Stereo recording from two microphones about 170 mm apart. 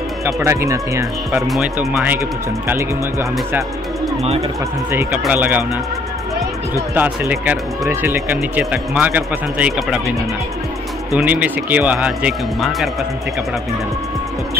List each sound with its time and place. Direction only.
0.2 s speech: 15° right (ahead or behind)
4.2 s speech: 35° right (ahead or behind)
4.9 s speech: 5° right (ahead or behind)
7.0 s speech: 10° right (ahead or behind)
11.1 s speech: 10° right (ahead or behind)